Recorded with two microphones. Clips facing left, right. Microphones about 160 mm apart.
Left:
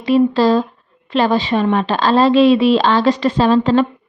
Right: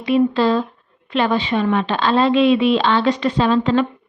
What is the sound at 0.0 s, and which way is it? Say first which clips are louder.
Speech: left 3 dB; 35° left (ahead or behind).